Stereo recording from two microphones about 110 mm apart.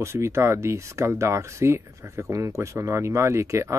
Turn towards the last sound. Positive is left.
turn(degrees=-25)  # may be behind; listen again after turning